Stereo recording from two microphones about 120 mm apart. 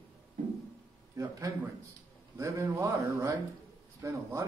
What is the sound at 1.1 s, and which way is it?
A man's voice, 30° right (ahead or behind).